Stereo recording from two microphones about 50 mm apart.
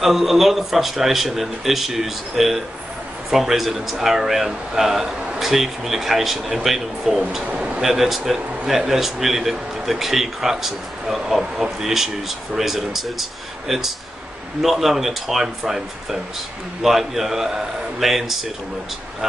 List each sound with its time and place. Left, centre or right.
0.0 s speech: centre
7.5 s a sound: centre
7.8 s speech: centre